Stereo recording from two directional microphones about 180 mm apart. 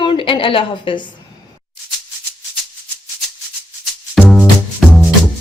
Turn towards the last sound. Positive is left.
turn(degrees=0)  # may be behind; listen again after turning